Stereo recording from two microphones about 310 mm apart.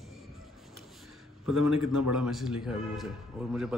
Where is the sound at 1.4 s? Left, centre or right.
Left.